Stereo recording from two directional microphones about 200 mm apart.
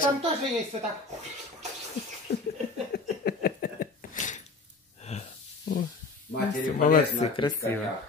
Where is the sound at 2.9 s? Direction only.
50° left (ahead or behind); by 5.3 s 35° left (ahead or behind).